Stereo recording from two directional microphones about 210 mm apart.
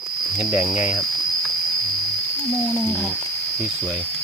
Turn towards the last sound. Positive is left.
turn(degrees=10)  # may be behind; listen again after turning